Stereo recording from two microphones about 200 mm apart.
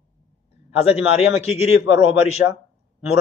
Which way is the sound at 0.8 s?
30° left (ahead or behind).